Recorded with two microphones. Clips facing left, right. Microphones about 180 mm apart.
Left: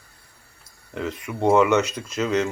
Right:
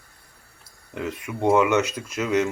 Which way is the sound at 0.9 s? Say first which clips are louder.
Left 1 dB; 10° right (ahead or behind).